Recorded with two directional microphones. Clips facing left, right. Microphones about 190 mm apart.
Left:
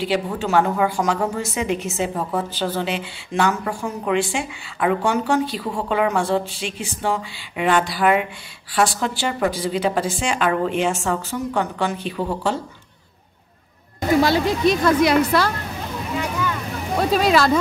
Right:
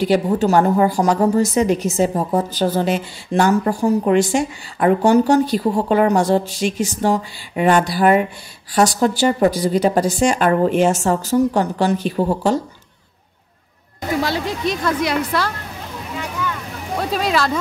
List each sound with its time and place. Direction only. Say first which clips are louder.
0.0 s a woman's voice: right 6 dB; 45° right (ahead or behind)
14.2 s speech: left 4 dB; 5° left (ahead or behind)
16.2 s a sound: left 1 dB; 15° left (ahead or behind)
17.1 s speech: left 3 dB; 10° left (ahead or behind)